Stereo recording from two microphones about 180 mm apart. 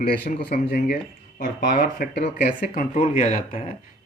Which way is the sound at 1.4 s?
45° left (ahead or behind).